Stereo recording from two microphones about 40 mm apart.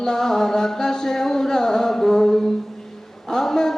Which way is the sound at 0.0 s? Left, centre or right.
Centre.